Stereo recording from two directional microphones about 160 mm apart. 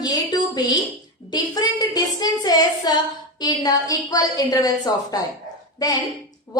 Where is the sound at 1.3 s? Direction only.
25° left (ahead or behind).